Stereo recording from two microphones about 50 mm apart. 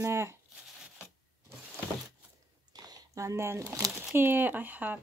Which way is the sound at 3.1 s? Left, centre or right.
Right.